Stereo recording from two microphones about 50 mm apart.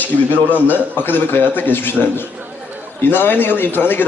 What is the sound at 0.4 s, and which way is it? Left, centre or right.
A man's voice, left.